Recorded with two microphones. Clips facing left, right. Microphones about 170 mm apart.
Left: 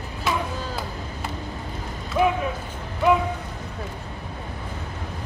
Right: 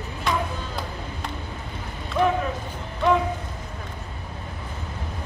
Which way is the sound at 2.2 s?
5° left (ahead or behind).